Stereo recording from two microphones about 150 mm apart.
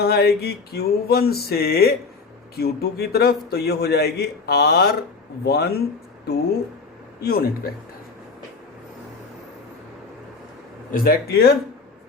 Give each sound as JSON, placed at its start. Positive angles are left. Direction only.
{"t": 0.0, "sound": "speech", "side_deg": 90}
{"t": 7.2, "sound": "speech", "side_deg": 90}
{"t": 10.9, "sound": "speech", "side_deg": 75}